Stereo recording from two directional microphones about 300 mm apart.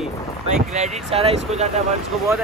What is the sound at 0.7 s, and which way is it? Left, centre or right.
Speech, right.